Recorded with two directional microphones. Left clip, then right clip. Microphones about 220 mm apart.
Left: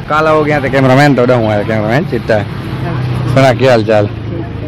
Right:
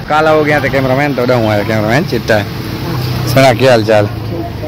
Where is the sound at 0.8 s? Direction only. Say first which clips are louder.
Left 4 dB; 40° left (ahead or behind).